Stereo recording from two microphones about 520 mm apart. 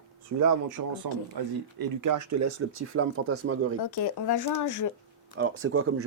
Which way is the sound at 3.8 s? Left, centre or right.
Left.